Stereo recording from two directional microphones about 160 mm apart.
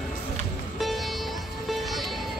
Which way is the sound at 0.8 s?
Centre (ahead or behind).